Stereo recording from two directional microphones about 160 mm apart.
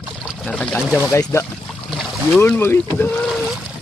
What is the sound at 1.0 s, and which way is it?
Speech, 15° left (ahead or behind).